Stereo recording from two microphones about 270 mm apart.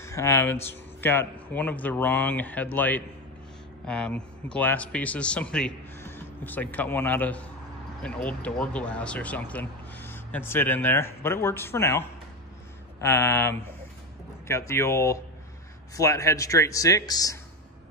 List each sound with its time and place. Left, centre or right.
0.0 s speech: centre